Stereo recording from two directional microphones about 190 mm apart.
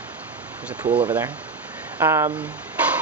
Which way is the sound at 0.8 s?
25° right (ahead or behind).